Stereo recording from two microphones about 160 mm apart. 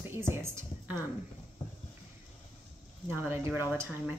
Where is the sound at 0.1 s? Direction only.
15° right (ahead or behind).